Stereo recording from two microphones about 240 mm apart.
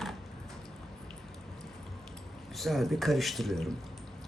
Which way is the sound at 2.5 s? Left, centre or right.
Centre.